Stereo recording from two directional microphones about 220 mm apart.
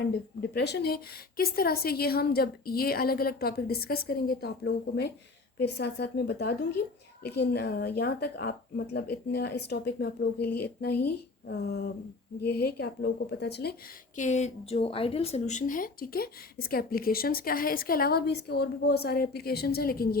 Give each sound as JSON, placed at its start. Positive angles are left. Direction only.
{"t": 0.5, "sound": "speech", "side_deg": 50}
{"t": 14.2, "sound": "speech", "side_deg": 30}